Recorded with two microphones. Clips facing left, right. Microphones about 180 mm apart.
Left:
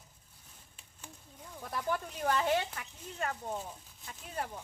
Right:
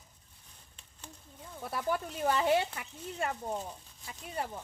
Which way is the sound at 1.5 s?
10° right (ahead or behind).